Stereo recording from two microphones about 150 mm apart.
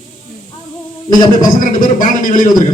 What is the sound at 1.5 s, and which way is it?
Speech, 60° left (ahead or behind).